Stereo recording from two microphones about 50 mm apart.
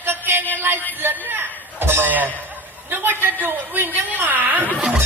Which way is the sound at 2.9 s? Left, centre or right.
Right.